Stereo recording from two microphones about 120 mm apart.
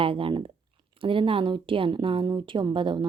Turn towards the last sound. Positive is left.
turn(degrees=-45)  # may be behind; listen again after turning